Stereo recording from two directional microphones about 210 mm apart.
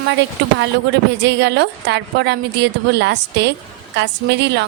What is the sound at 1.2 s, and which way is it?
A woman's voice, 55° right (ahead or behind).